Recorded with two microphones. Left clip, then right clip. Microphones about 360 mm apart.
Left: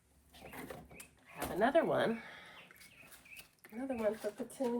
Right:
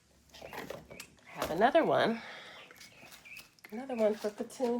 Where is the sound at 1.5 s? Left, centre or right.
Right.